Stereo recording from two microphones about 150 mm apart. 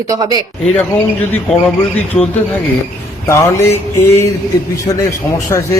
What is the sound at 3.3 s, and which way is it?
A man's voice, 20° left (ahead or behind).